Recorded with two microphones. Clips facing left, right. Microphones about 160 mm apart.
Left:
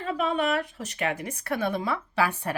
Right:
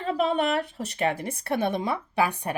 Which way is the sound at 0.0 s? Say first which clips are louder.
Right 2 dB; 35° right (ahead or behind).